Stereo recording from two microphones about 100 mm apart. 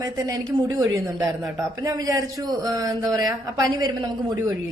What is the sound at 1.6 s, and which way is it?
A woman's voice, 35° right (ahead or behind).